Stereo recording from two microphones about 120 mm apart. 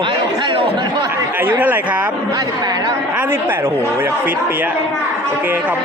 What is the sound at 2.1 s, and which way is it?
Speech, 35° right (ahead or behind).